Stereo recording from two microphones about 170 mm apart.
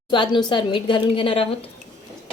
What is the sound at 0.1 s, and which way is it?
A woman's voice, 25° left (ahead or behind).